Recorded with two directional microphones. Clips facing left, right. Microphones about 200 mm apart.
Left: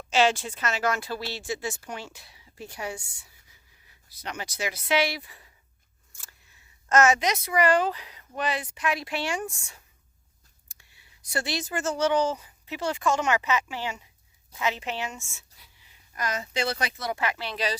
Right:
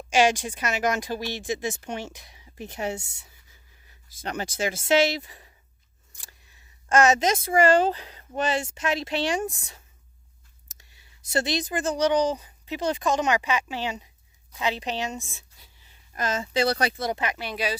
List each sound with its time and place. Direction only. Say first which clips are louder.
0.1 s speech: right 2 dB; 15° right (ahead or behind)
3.8 s a sound: right 6 dB; 45° right (ahead or behind)
4.6 s speech: right 4 dB; 50° right (ahead or behind)
5.0 s speech: right 5 dB; 25° right (ahead or behind)
6.2 s scissors: right 2 dB; 35° right (ahead or behind)
6.9 s speech: right 1 dB; 20° right (ahead or behind)
7.2 s speech: right 4 dB; 50° right (ahead or behind)
7.6 s speech: right 3 dB; 25° right (ahead or behind)
9.5 s speech: right 4 dB; 35° right (ahead or behind)
11.3 s speech: right 4 dB; 20° right (ahead or behind)
15.5 s a sound: right 1 dB; 35° left (ahead or behind)
16.1 s speech: right 4 dB; 25° right (ahead or behind)
17.2 s speech: even; 20° right (ahead or behind)